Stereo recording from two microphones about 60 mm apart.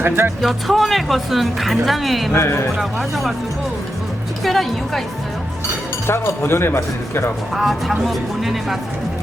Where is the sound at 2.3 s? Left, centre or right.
Left.